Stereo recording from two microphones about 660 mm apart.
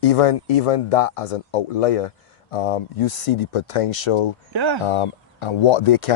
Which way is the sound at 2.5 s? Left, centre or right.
Left.